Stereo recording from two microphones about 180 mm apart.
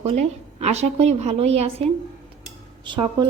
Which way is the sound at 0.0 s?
35° right (ahead or behind).